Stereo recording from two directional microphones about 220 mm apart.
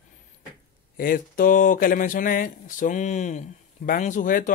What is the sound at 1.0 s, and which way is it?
Speech, 40° left (ahead or behind).